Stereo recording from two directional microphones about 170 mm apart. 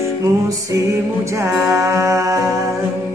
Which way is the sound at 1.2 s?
15° right (ahead or behind).